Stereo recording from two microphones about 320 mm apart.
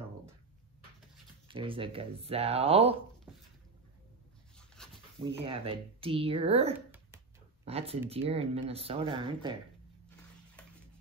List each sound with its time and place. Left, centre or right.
1.5 s speech: centre
3.3 s dog: centre
4.6 s dog: centre
5.2 s speech: centre